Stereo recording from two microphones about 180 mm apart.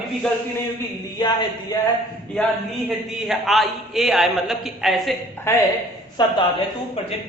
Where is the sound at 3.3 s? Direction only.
Centre (ahead or behind).